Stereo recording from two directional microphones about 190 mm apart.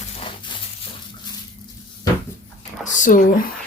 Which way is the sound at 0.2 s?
25° left (ahead or behind).